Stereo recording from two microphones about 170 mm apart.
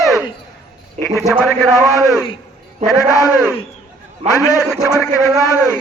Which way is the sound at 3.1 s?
20° left (ahead or behind).